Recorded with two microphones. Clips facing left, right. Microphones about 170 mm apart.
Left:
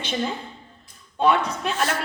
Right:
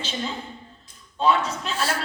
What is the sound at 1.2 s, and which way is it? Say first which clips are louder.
Speech: left 1 dB; 60° left (ahead or behind).